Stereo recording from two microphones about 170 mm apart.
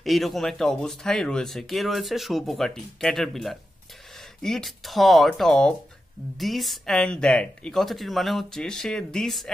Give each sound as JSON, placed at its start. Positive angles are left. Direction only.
{"t": 0.0, "sound": "speech", "side_deg": 0}